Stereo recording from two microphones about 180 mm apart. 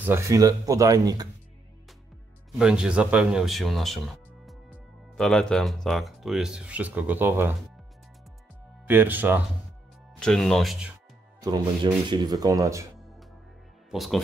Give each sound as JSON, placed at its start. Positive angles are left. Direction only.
{"t": 0.0, "sound": "speech", "side_deg": -15}
{"t": 2.6, "sound": "speech", "side_deg": -5}
{"t": 8.8, "sound": "speech", "side_deg": -10}
{"t": 10.1, "sound": "speech", "side_deg": 5}
{"t": 11.4, "sound": "speech", "side_deg": -25}
{"t": 13.8, "sound": "speech", "side_deg": 0}